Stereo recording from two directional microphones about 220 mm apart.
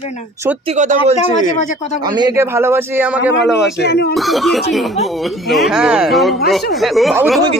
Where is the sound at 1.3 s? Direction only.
35° left (ahead or behind).